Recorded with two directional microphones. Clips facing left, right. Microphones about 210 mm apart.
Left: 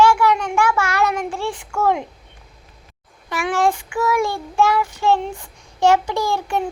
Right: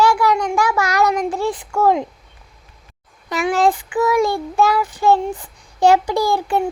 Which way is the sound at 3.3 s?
15° right (ahead or behind).